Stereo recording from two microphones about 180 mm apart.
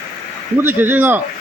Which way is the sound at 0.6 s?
10° right (ahead or behind).